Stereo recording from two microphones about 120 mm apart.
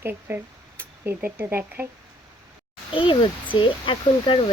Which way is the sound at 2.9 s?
45° left (ahead or behind).